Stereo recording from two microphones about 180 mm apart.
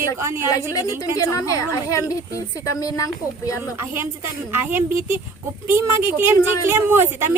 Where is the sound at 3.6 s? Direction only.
15° right (ahead or behind).